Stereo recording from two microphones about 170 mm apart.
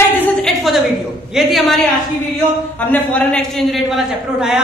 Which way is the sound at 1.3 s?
Centre (ahead or behind).